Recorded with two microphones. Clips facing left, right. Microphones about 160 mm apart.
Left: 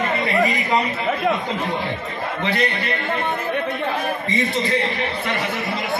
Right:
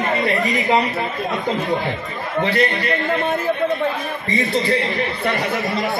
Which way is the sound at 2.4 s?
40° right (ahead or behind).